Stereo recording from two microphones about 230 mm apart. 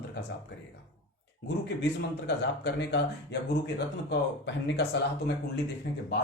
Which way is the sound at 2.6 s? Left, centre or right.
Left.